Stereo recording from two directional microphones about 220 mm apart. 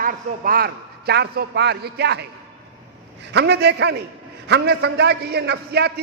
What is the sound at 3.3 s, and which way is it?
A man's voice, 50° right (ahead or behind).